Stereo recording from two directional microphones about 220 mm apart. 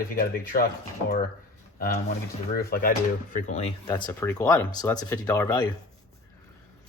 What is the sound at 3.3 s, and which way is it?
Speech, 30° left (ahead or behind).